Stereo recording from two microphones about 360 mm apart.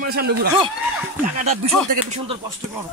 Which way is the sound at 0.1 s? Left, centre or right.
Right.